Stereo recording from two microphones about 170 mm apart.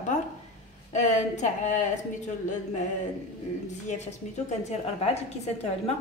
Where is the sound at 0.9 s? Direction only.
45° left (ahead or behind).